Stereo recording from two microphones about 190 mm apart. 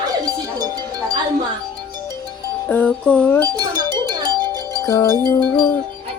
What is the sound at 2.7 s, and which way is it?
Speech, 5° left (ahead or behind).